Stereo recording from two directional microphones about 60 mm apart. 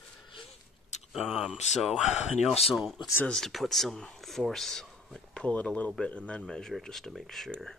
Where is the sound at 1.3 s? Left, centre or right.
Centre.